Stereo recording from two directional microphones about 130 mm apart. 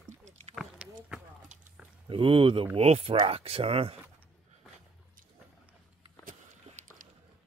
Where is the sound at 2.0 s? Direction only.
40° right (ahead or behind).